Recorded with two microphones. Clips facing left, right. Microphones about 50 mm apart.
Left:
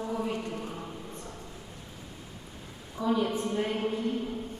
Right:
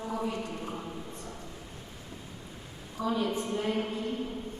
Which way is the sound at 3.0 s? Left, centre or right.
Right.